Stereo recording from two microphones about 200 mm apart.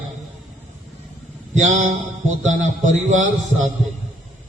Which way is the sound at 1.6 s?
40° right (ahead or behind).